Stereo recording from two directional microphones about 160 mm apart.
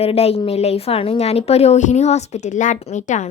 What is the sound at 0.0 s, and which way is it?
A woman's voice, 40° left (ahead or behind).